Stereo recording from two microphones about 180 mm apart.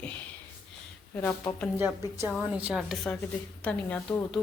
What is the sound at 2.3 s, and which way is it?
A woman's voice, 5° right (ahead or behind).